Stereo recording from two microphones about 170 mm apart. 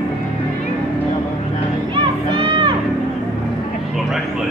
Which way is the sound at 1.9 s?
30° right (ahead or behind).